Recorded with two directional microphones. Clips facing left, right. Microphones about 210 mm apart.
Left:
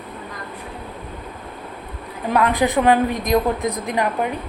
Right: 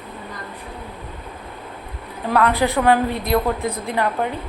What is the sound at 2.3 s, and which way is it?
A woman's voice, 15° left (ahead or behind).